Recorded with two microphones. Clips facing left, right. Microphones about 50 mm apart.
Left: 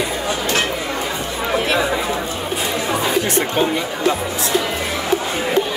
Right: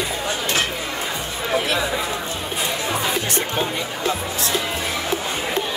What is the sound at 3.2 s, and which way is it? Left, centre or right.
Speech, left.